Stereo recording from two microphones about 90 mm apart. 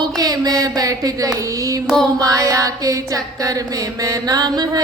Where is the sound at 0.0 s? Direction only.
45° right (ahead or behind).